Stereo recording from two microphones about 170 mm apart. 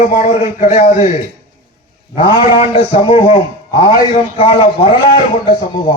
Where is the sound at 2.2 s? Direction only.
30° left (ahead or behind).